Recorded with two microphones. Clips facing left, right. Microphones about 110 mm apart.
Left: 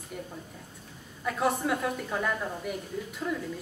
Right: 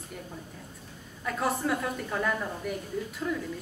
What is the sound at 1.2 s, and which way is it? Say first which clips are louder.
A woman's voice: left 1 dB; centre (ahead or behind).